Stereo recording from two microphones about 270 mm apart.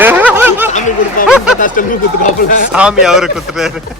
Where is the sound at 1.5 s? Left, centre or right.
Left.